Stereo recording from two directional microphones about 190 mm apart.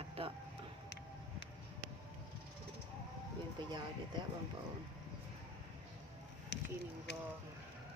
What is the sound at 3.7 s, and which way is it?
Speech, 25° right (ahead or behind).